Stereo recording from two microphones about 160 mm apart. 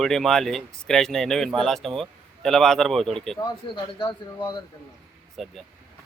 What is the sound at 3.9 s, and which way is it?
Speech, 30° left (ahead or behind).